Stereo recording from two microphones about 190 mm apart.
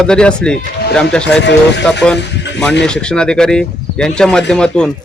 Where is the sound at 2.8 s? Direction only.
5° left (ahead or behind).